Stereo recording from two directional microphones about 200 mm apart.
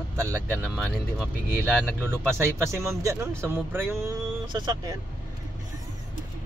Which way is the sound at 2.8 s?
15° right (ahead or behind).